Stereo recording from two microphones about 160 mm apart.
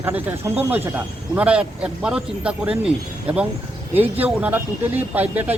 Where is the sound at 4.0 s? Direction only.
10° right (ahead or behind).